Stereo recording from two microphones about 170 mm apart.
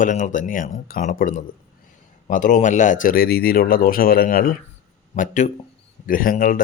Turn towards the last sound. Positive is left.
turn(degrees=55)  # may be behind; listen again after turning